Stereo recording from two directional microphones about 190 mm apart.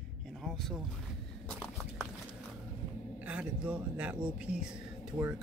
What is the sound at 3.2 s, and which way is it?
Speech, 5° right (ahead or behind).